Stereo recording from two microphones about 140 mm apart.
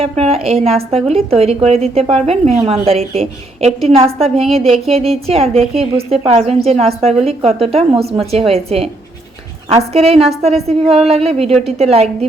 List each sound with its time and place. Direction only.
0.0 s a woman's voice: 45° right (ahead or behind)